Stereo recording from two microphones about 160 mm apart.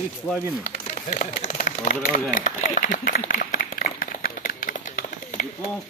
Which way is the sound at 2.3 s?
55° left (ahead or behind).